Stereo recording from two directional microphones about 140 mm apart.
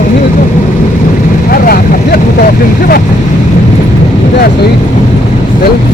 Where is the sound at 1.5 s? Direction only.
90° left.